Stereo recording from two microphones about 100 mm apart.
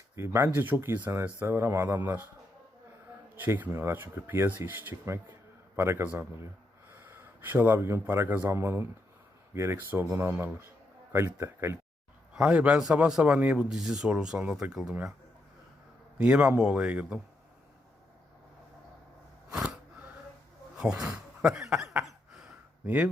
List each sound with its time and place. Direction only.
0.2 s speech: 25° right (ahead or behind)
3.3 s speech: 20° right (ahead or behind)
12.3 s speech: 10° right (ahead or behind)
16.1 s speech: 10° right (ahead or behind)
19.5 s a sound: 5° right (ahead or behind)
20.7 s speech: 5° right (ahead or behind)
21.7 s cough: 5° right (ahead or behind)